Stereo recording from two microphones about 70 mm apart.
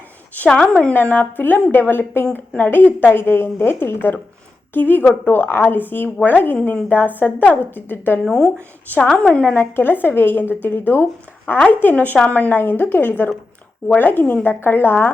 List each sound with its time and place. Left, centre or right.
0.4 s a woman's voice: centre
8.2 s speech: centre
9.4 s a woman's voice: left